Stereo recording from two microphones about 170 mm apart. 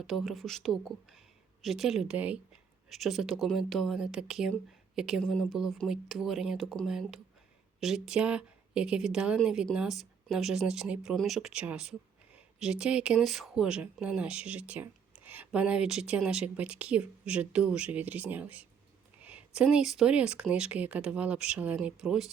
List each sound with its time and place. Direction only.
0.1 s a woman's voice: centre (ahead or behind)